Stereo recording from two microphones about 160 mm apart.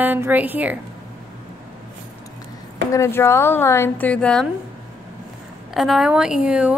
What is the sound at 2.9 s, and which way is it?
Speech, 15° left (ahead or behind).